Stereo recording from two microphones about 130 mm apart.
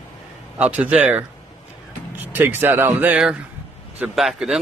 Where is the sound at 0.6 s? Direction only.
10° right (ahead or behind).